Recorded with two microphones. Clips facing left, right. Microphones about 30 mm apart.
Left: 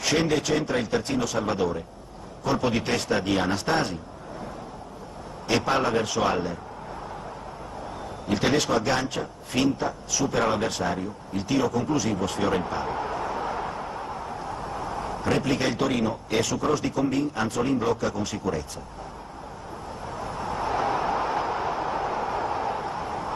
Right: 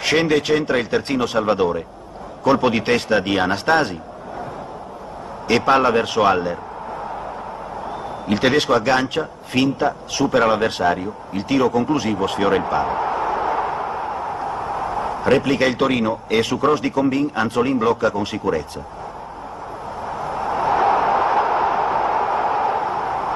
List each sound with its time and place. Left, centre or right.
0.0 s a man's voice: right
5.5 s a man's voice: right
8.3 s a man's voice: right
20.1 s a sound: right